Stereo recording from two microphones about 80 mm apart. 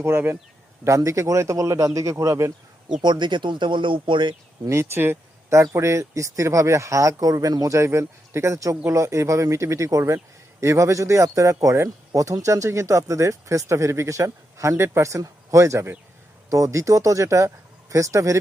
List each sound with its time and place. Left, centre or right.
0.0 s speech: right
0.9 s speech: right
3.0 s speech: right
4.7 s speech: right